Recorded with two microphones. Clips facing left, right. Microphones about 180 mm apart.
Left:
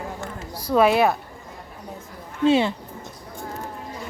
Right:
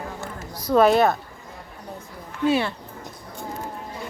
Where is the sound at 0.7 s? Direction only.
5° left (ahead or behind).